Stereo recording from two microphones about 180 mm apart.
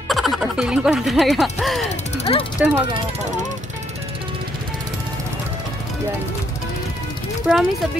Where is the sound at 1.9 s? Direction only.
40° left (ahead or behind).